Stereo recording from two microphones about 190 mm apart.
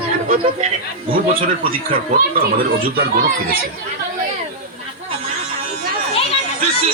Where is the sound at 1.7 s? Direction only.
50° right (ahead or behind).